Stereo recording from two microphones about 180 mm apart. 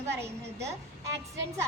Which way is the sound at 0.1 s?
15° right (ahead or behind).